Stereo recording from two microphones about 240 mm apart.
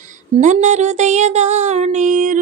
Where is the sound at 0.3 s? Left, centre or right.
Right.